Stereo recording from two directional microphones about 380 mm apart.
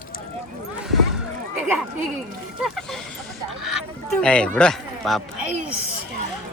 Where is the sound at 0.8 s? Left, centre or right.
Centre.